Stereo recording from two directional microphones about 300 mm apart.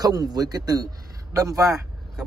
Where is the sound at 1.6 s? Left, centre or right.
Centre.